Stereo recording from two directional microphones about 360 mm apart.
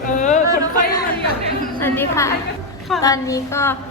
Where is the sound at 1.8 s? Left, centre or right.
Centre.